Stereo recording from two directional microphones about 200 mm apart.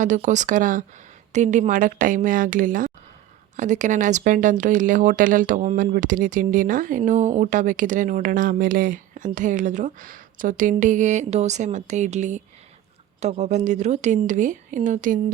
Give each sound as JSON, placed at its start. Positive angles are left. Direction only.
{"t": 0.0, "sound": "speech", "side_deg": -40}